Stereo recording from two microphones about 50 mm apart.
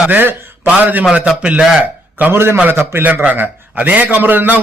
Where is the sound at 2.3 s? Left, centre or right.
Right.